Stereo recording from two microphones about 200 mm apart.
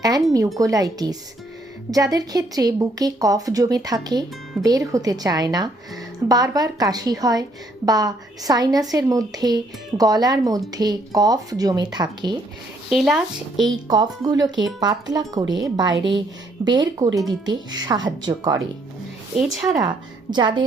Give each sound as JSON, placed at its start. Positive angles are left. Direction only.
{"t": 0.3, "sound": "speech", "side_deg": -15}
{"t": 12.9, "sound": "speech", "side_deg": 0}
{"t": 13.6, "sound": "speech", "side_deg": -20}